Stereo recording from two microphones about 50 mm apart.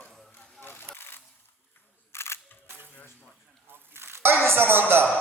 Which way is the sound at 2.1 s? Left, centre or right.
Left.